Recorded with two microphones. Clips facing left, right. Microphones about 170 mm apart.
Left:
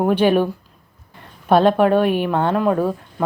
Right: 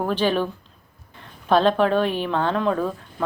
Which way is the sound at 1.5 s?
10° left (ahead or behind).